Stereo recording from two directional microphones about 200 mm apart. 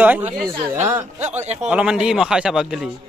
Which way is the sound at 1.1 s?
35° right (ahead or behind).